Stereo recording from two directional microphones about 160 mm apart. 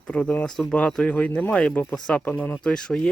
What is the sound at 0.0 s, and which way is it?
Speech, 5° left (ahead or behind).